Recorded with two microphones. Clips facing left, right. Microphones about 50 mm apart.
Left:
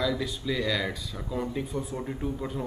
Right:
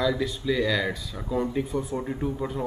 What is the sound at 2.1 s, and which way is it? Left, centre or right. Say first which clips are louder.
Speech: right 3 dB; centre.